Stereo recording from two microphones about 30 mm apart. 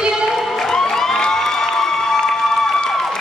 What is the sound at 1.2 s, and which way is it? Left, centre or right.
Music, centre.